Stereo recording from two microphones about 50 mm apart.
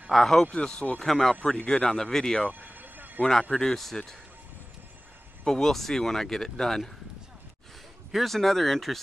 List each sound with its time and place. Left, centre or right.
0.1 s speech: centre
2.6 s vehicle: right
3.2 s speech: centre
5.4 s speech: centre
8.1 s speech: centre